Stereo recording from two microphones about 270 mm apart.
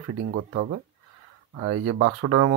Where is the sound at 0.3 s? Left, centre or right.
Right.